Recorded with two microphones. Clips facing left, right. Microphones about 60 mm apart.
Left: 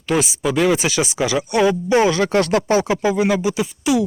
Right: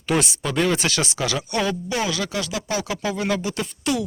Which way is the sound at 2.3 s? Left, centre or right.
Left.